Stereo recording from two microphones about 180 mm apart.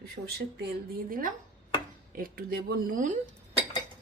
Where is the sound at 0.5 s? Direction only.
60° right (ahead or behind).